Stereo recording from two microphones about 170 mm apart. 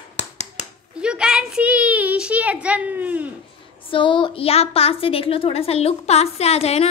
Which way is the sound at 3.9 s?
30° left (ahead or behind).